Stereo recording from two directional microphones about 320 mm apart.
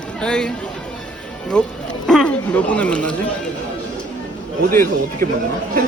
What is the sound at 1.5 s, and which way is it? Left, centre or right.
Speech, centre.